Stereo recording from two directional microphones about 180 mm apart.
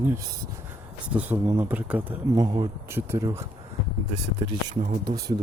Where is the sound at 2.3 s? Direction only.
20° right (ahead or behind).